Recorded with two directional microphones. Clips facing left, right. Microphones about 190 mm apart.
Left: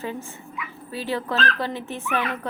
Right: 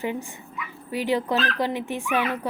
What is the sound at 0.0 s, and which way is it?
Speech, 15° right (ahead or behind).